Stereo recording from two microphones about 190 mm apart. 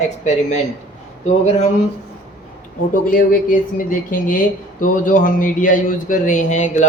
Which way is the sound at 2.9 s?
45° left (ahead or behind).